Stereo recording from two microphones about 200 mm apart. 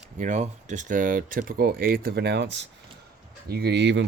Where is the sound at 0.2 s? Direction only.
40° right (ahead or behind).